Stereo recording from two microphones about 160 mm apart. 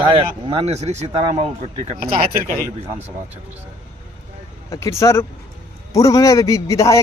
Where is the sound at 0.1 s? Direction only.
35° right (ahead or behind).